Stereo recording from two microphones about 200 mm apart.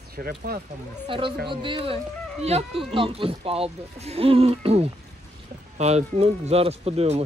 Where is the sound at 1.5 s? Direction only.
25° right (ahead or behind).